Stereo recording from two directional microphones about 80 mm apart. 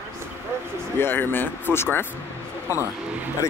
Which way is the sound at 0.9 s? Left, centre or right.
Left.